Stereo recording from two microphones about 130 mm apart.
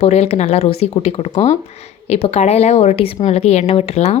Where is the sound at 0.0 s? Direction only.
55° left (ahead or behind).